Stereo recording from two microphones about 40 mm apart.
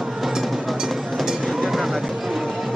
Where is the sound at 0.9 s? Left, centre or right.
Centre.